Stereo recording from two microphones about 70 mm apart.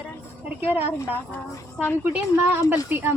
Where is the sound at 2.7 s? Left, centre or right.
Right.